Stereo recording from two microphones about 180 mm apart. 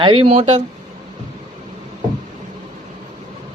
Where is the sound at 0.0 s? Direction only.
30° right (ahead or behind).